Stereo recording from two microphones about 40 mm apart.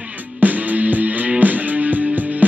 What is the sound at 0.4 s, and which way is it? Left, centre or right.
Music, right.